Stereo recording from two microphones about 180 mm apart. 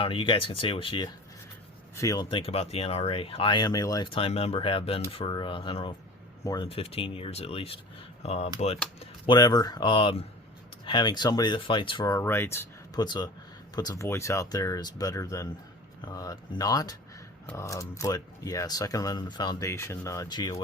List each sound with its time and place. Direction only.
0.0 s speech: 30° left (ahead or behind)
2.3 s speech: 30° left (ahead or behind)
6.7 s speech: 35° left (ahead or behind)
9.2 s speech: 25° left (ahead or behind)
12.1 s speech: 15° left (ahead or behind)